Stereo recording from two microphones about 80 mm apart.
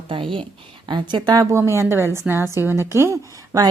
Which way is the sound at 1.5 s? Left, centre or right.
Right.